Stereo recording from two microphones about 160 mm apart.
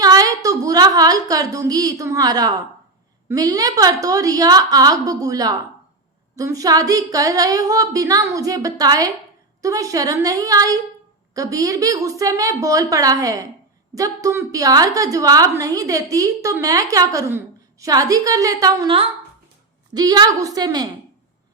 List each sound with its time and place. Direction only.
0.0 s a woman's voice: 25° right (ahead or behind)